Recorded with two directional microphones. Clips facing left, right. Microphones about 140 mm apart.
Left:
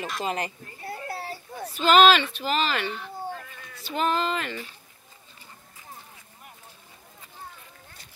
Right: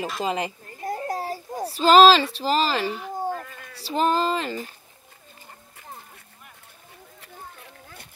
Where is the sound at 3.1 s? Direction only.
45° right (ahead or behind).